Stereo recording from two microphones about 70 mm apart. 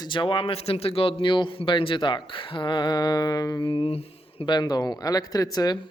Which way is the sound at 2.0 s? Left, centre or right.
Left.